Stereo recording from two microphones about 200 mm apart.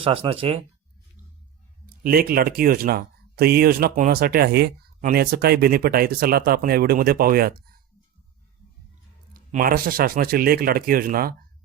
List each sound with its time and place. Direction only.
0.0 s speech: 25° right (ahead or behind)
2.0 s speech: 50° right (ahead or behind)
9.3 s speech: 45° right (ahead or behind)